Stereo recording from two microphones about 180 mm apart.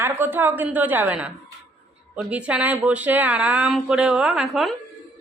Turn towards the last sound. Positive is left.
turn(degrees=-5)  # may be behind; listen again after turning